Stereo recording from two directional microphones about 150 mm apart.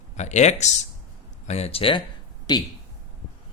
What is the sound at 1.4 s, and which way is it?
Speech, 45° left (ahead or behind).